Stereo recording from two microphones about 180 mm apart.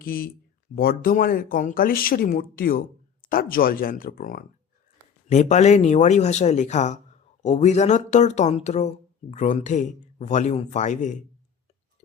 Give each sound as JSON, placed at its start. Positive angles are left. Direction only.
{"t": 0.0, "sound": "speech", "side_deg": 55}